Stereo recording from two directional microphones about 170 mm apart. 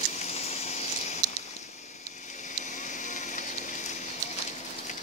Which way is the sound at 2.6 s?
45° left (ahead or behind).